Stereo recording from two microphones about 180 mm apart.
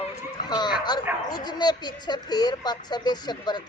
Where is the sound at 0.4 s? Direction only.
25° left (ahead or behind).